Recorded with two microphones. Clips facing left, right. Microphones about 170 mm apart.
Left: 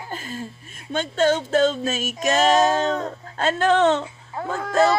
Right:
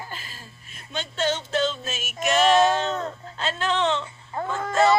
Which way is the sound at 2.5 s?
40° left (ahead or behind).